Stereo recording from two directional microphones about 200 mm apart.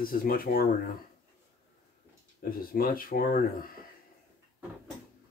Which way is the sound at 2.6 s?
45° left (ahead or behind).